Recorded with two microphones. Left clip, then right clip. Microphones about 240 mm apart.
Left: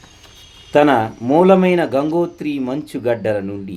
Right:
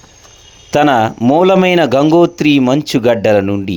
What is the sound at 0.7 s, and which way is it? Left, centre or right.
Speech, right.